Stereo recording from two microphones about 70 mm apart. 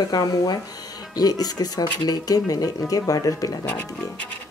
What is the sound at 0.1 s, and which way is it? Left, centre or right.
Speech, left.